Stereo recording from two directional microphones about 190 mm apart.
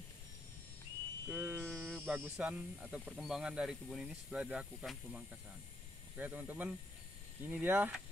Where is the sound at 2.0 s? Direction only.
5° right (ahead or behind).